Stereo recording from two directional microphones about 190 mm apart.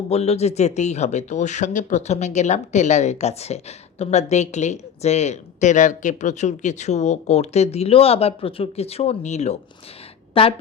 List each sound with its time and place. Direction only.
0.1 s a woman's voice: 35° left (ahead or behind)